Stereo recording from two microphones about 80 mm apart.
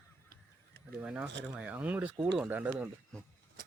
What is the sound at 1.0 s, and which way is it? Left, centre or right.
Speech, centre.